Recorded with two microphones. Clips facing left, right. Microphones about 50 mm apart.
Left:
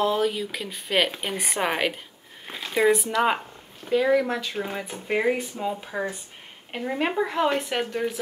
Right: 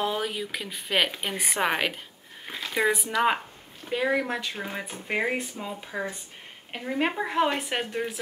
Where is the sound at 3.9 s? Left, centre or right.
Centre.